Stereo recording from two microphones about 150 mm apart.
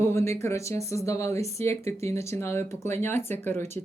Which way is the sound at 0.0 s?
20° left (ahead or behind).